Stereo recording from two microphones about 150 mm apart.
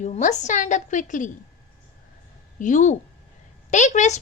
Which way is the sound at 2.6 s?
55° left (ahead or behind).